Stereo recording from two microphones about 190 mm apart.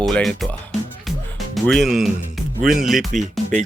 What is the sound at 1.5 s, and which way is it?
Speech, centre (ahead or behind).